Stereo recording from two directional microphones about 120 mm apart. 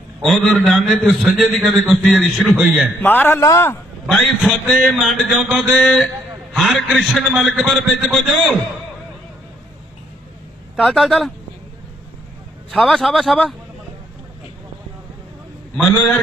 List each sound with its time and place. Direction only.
0.2 s a man's voice: centre (ahead or behind)
3.0 s a man's voice: 15° left (ahead or behind)
4.4 s a man's voice: centre (ahead or behind)
10.8 s a man's voice: centre (ahead or behind)
12.7 s a man's voice: centre (ahead or behind)